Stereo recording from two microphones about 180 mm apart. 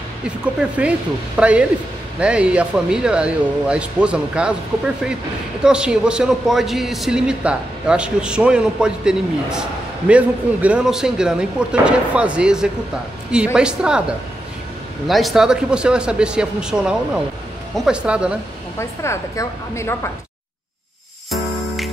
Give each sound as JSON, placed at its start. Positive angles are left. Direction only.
{"t": 0.6, "sound": "a man's voice", "side_deg": -5}
{"t": 5.6, "sound": "a man's voice", "side_deg": -5}
{"t": 18.8, "sound": "a woman's voice", "side_deg": 15}